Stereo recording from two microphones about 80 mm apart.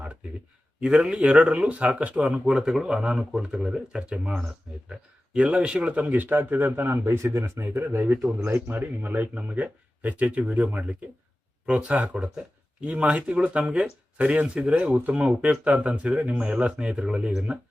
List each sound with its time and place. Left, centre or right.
0.8 s speech: centre